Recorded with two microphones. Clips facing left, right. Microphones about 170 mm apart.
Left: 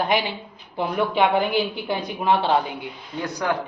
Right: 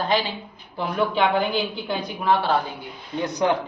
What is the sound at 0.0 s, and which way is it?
A woman's voice, 15° left (ahead or behind).